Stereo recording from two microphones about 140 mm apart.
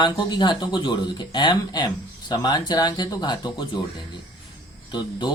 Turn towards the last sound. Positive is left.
turn(degrees=30)  # may be behind; listen again after turning